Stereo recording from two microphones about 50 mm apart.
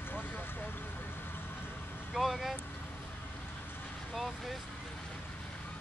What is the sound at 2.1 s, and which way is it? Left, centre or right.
Vehicle, centre.